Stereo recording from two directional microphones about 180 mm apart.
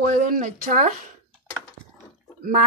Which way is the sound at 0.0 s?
45° right (ahead or behind).